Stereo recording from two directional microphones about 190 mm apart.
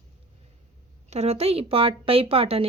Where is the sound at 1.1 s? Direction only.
35° right (ahead or behind).